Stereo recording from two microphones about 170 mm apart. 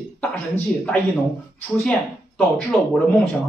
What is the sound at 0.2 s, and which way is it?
Speech, 5° left (ahead or behind).